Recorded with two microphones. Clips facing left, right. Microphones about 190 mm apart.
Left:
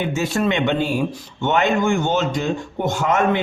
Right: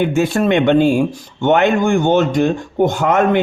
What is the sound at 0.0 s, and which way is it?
Speech, 55° right (ahead or behind).